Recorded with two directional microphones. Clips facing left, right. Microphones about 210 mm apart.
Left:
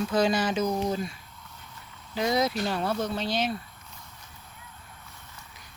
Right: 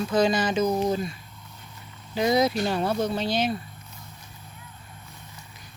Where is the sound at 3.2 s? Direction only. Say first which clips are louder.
Right 3 dB; centre (ahead or behind).